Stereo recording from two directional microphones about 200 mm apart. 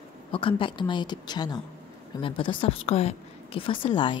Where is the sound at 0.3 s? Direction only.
25° left (ahead or behind).